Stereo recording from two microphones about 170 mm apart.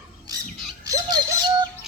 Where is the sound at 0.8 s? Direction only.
20° right (ahead or behind).